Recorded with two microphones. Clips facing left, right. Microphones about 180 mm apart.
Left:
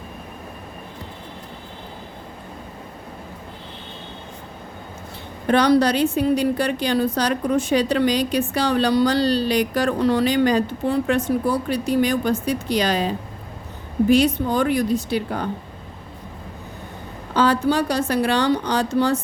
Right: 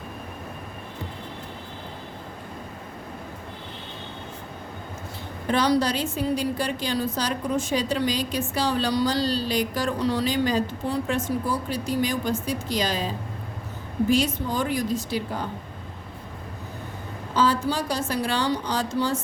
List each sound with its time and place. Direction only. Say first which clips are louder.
5.5 s a woman's voice: left 6 dB; 60° left (ahead or behind)
17.3 s a woman's voice: left 5 dB; 65° left (ahead or behind)